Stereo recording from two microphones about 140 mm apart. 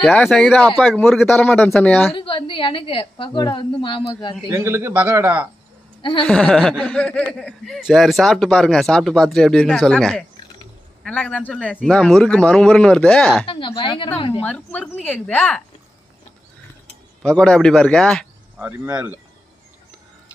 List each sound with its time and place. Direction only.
0.0 s speech: centre (ahead or behind)
1.3 s speech: 10° left (ahead or behind)
2.1 s a woman's voice: 40° left (ahead or behind)
4.5 s a man's voice: 20° right (ahead or behind)
6.2 s speech: 10° left (ahead or behind)
13.5 s a woman's voice: 35° left (ahead or behind)
14.4 s speech: 10° left (ahead or behind)
17.2 s speech: 5° left (ahead or behind)
18.6 s a man's voice: 10° right (ahead or behind)